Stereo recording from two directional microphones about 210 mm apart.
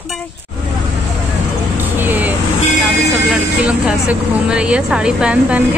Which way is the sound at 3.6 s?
5° right (ahead or behind).